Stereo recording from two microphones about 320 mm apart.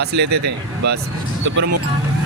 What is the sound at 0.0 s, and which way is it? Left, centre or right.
Speech, right.